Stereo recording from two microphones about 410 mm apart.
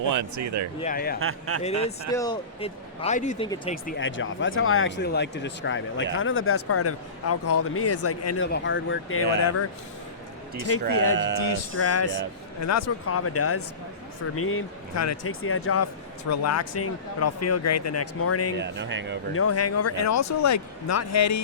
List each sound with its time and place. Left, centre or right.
0.0 s speech: right
0.8 s speech: centre
1.2 s speech: right
1.6 s a man's voice: centre; by 9.6 s left
10.7 s a man's voice: left
18.5 s speech: right
19.3 s a man's voice: left